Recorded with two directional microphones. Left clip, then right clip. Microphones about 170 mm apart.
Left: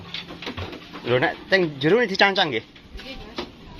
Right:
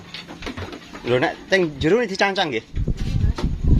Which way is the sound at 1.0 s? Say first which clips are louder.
Right 1 dB; 25° right (ahead or behind).